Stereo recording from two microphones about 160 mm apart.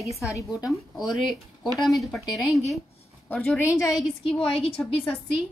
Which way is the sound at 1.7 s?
Centre (ahead or behind).